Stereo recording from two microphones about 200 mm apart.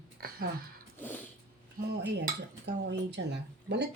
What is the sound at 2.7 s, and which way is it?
Speech, 60° right (ahead or behind).